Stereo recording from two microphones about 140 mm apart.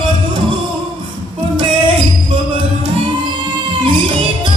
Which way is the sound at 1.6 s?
35° right (ahead or behind).